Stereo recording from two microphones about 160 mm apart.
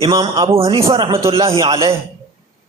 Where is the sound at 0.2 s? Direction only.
35° right (ahead or behind).